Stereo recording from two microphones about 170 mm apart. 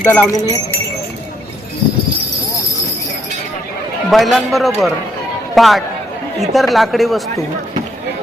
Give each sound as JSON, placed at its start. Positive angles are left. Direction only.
{"t": 0.0, "sound": "speech", "side_deg": 10}
{"t": 4.1, "sound": "speech", "side_deg": 0}